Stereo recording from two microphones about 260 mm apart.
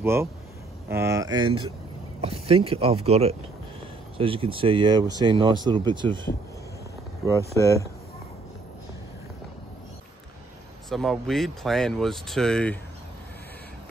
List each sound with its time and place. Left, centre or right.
0.0 s speech: centre
7.5 s speech: centre
10.9 s speech: centre